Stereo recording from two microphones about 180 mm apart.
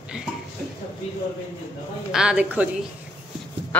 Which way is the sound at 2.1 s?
5° right (ahead or behind).